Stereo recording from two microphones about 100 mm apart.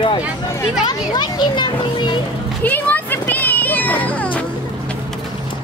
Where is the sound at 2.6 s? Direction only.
20° left (ahead or behind).